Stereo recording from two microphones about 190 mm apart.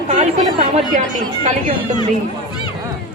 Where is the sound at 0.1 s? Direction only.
40° right (ahead or behind).